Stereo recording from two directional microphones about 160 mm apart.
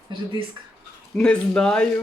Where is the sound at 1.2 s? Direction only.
5° left (ahead or behind).